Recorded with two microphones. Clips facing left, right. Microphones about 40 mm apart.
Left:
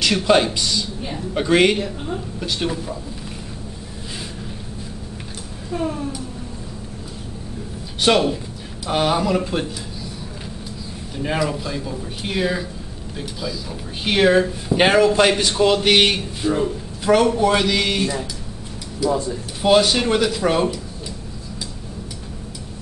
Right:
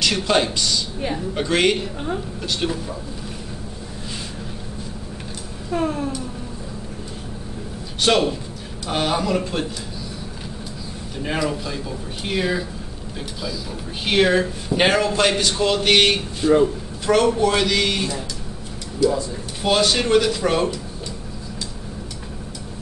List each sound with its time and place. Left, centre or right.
0.0 s a man's voice: centre
5.7 s a sound: right
8.0 s a man's voice: centre
11.2 s a man's voice: centre
14.0 s a man's voice: centre
19.0 s speech: left
19.6 s a man's voice: centre